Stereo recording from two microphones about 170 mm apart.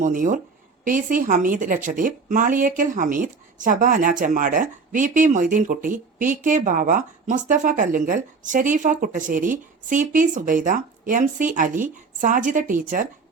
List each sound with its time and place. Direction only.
0.0 s a woman's voice: 50° right (ahead or behind)